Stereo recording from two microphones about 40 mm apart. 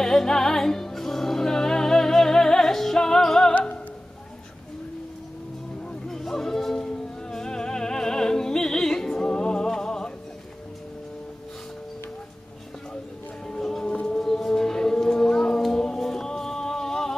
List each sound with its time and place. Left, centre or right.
0.0 s music: centre
3.5 s music: left
6.0 s music: centre
13.5 s music: centre